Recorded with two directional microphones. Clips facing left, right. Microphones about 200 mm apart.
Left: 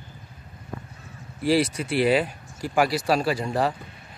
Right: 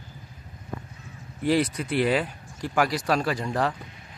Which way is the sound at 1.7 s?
10° left (ahead or behind).